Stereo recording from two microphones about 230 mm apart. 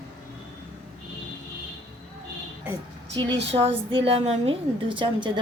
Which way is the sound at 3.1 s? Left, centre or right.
Right.